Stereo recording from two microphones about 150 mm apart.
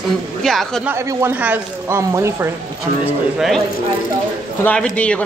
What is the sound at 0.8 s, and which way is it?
Speech, 15° right (ahead or behind).